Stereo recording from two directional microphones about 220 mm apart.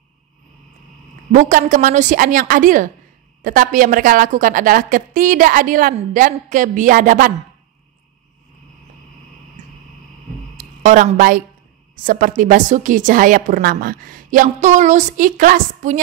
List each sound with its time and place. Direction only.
1.3 s a woman's voice: 35° right (ahead or behind)
9.6 s vehicle: 30° right (ahead or behind)
10.6 s a woman's voice: 35° right (ahead or behind)